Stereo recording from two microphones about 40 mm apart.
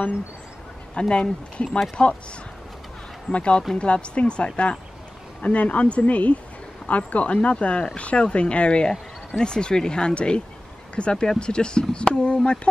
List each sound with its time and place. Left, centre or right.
0.9 s speech: left
3.3 s speech: left